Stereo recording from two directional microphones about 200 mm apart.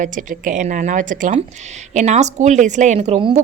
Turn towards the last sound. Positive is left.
turn(degrees=-30)  # may be behind; listen again after turning